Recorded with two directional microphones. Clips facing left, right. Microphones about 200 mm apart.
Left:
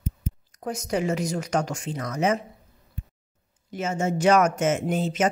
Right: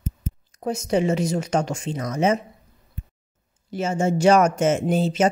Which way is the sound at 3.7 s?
30° right (ahead or behind).